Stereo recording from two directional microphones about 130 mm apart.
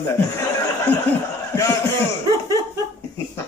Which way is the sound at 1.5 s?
25° left (ahead or behind).